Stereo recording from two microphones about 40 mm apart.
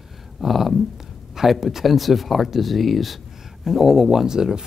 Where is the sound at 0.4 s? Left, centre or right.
Centre.